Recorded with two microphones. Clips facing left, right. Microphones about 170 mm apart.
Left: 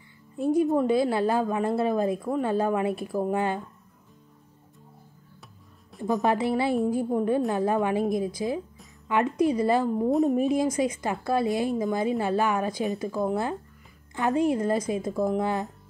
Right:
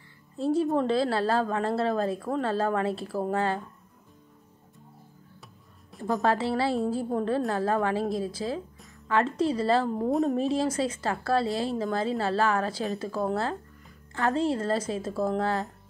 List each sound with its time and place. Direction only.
0.4 s a woman's voice: 15° left (ahead or behind)
5.4 s music: centre (ahead or behind)
6.2 s a woman's voice: 20° left (ahead or behind)
10.0 s a woman's voice: centre (ahead or behind)
10.3 s a woman's voice: 15° left (ahead or behind)